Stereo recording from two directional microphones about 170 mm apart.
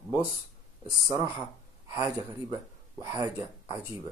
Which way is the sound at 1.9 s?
20° right (ahead or behind).